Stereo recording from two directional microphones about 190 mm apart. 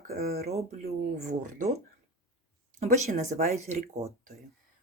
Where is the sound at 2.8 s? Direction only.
40° right (ahead or behind).